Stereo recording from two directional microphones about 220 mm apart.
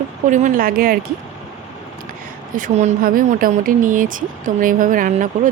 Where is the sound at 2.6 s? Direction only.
35° right (ahead or behind).